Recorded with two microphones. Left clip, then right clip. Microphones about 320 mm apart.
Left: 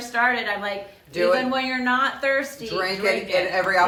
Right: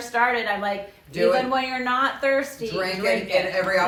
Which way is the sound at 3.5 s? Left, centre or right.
Centre.